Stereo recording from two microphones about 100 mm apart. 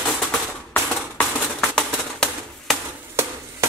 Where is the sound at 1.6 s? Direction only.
5° left (ahead or behind).